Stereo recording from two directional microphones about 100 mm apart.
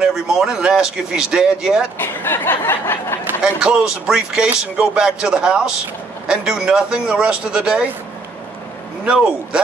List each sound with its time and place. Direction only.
0.0 s speech: 5° right (ahead or behind)
2.0 s a sound: 20° left (ahead or behind)
3.4 s speech: 10° right (ahead or behind)
9.0 s speech: 10° right (ahead or behind)